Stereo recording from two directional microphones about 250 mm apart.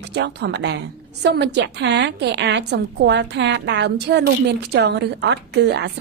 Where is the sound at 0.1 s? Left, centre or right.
Right.